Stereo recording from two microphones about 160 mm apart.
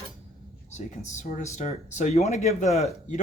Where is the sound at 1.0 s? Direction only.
45° left (ahead or behind).